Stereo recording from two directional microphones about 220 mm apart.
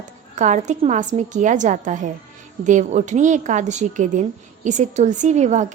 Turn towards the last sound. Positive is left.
turn(degrees=-30)  # may be behind; listen again after turning